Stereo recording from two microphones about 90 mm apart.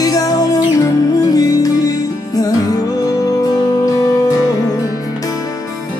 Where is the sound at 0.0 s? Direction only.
45° left (ahead or behind).